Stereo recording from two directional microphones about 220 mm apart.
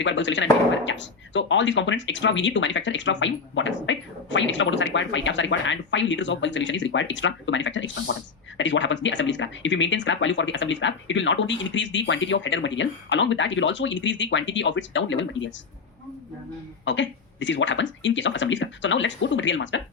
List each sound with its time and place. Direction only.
0.0 s speech: 55° left (ahead or behind)
16.8 s speech: 55° left (ahead or behind)